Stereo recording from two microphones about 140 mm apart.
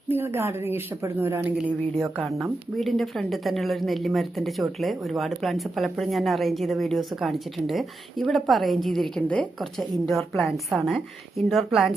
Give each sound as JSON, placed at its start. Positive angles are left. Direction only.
{"t": 0.1, "sound": "a woman's voice", "side_deg": -15}